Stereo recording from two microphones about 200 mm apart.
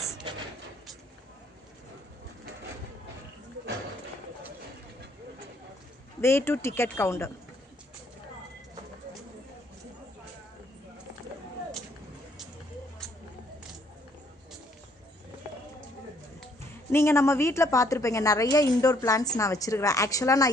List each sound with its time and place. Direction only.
6.2 s a woman's voice: 10° left (ahead or behind)
16.9 s a woman's voice: 10° left (ahead or behind)